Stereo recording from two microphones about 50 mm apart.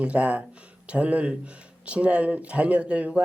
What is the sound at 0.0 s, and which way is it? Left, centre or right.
Speech, right.